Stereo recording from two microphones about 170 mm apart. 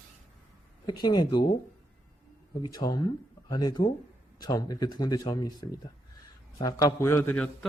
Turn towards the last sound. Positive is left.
turn(degrees=5)  # may be behind; listen again after turning